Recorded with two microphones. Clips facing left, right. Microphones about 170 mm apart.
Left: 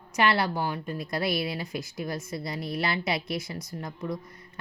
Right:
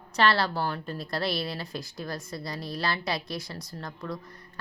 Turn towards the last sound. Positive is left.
turn(degrees=20)  # may be behind; listen again after turning